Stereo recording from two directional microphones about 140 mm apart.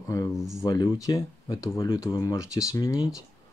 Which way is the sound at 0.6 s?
25° left (ahead or behind).